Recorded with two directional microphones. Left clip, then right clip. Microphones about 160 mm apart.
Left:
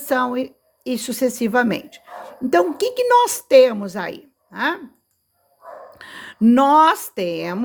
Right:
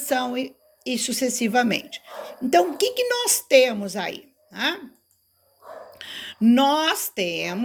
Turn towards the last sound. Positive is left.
turn(degrees=45)  # may be behind; listen again after turning